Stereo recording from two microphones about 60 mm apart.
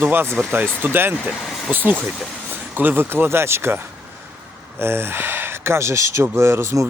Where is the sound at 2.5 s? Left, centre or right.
Right.